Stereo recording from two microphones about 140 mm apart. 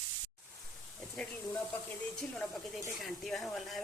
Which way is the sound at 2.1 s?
5° left (ahead or behind).